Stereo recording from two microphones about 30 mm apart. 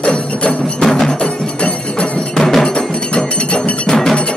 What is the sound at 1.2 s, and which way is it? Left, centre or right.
Music, left.